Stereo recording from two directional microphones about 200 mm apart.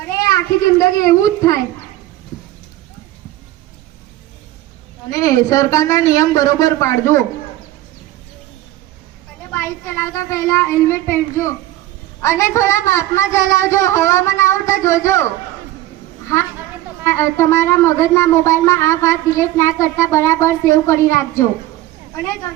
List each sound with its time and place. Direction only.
0.2 s speech: 15° left (ahead or behind)
5.0 s speech: 15° left (ahead or behind)
9.5 s speech: 10° left (ahead or behind)
17.0 s speech: 15° left (ahead or behind)